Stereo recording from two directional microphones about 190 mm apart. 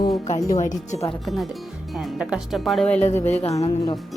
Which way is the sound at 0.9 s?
35° left (ahead or behind).